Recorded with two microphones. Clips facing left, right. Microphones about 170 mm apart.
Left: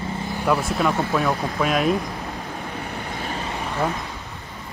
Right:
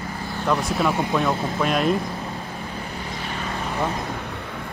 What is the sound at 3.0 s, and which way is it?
Vehicle, 45° left (ahead or behind).